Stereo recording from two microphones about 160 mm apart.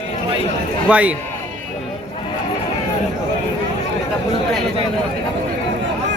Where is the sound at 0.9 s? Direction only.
10° right (ahead or behind).